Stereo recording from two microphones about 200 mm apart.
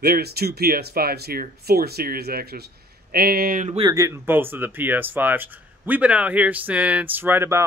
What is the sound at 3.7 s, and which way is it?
Speech, 20° right (ahead or behind).